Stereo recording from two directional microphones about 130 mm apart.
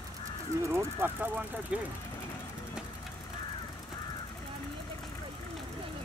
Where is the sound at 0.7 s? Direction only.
15° right (ahead or behind).